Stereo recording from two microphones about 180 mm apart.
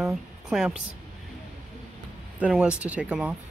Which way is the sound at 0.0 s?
Centre (ahead or behind).